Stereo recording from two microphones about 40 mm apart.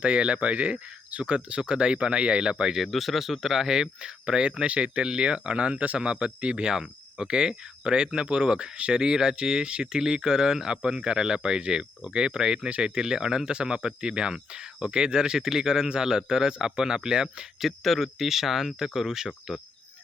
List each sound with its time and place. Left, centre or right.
0.0 s speech: right
2.7 s speech: centre
17.6 s speech: centre